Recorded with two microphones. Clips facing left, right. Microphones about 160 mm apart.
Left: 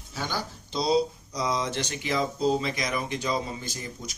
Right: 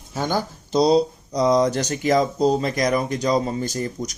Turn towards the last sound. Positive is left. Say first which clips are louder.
# right 11 dB
turn(degrees=-45)  # may be behind; listen again after turning